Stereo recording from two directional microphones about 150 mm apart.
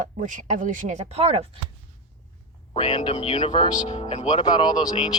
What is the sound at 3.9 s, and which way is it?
Speech, 50° left (ahead or behind).